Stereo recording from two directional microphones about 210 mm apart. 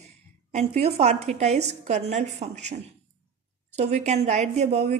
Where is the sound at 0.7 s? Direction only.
30° right (ahead or behind).